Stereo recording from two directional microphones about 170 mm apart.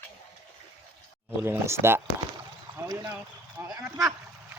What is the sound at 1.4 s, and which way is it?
Speech, 15° right (ahead or behind).